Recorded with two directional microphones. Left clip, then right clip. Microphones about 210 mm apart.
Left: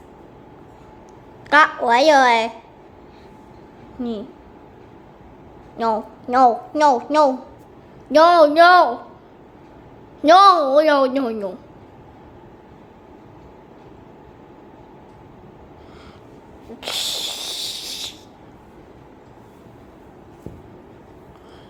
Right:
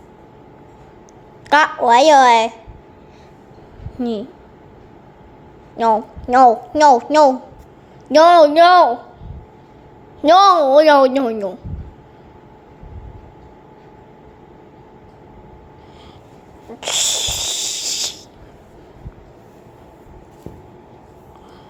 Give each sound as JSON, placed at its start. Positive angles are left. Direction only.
{"t": 1.5, "sound": "a woman's voice", "side_deg": -15}
{"t": 4.0, "sound": "a woman's voice", "side_deg": -20}
{"t": 5.7, "sound": "a woman's voice", "side_deg": -15}
{"t": 10.2, "sound": "a woman's voice", "side_deg": -10}
{"t": 16.8, "sound": "a sound", "side_deg": -15}